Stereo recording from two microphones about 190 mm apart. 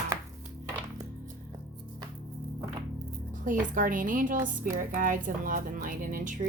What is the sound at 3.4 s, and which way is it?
A woman's voice, 45° right (ahead or behind).